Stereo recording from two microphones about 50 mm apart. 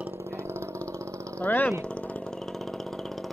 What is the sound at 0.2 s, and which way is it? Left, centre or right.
Vehicle, right.